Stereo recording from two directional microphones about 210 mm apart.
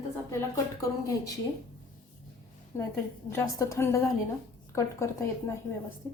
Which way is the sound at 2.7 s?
15° left (ahead or behind).